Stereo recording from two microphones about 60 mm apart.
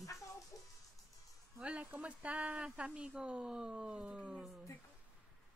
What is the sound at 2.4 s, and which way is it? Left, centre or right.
Speech, centre.